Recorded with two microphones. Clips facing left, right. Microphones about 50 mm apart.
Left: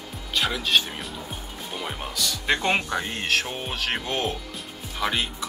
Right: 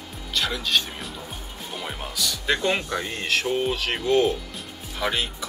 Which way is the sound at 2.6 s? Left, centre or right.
Left.